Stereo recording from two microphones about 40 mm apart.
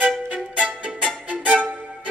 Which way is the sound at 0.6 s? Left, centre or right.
Right.